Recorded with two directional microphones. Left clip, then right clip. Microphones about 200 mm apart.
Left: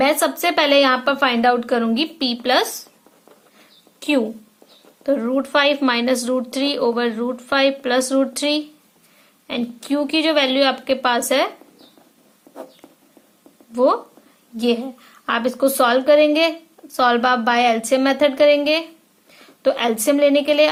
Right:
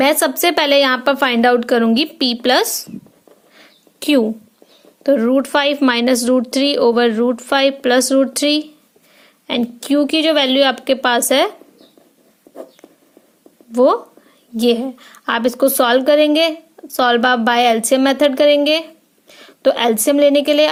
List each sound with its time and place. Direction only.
0.0 s a woman's voice: 40° right (ahead or behind)
4.0 s a woman's voice: 35° right (ahead or behind)
12.5 s a sound: 5° left (ahead or behind)
13.7 s a woman's voice: 30° right (ahead or behind)